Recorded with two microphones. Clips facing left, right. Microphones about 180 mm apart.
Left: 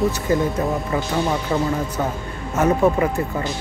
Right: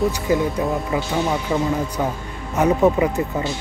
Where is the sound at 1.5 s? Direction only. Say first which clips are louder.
Even; 10° right (ahead or behind).